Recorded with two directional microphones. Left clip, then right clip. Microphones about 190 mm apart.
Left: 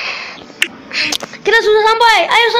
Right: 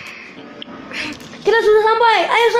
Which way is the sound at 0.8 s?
Centre (ahead or behind).